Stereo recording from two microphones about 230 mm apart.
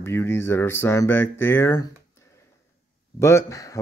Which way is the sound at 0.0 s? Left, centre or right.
Centre.